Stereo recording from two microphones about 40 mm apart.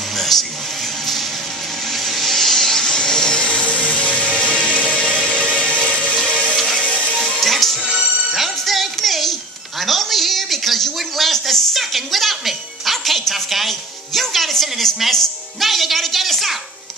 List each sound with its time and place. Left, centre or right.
0.1 s a sound: centre
1.9 s a sound: centre; by 4.2 s left
4.2 s music: left
4.9 s music: centre
6.5 s music: centre
6.9 s music: left
7.2 s music: centre
7.8 s music: right
8.3 s music: centre
9.8 s a sound: centre
15.0 s music: centre